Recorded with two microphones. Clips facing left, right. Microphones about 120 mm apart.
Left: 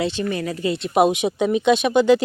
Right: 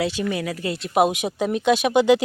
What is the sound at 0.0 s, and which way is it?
Speech, 10° right (ahead or behind).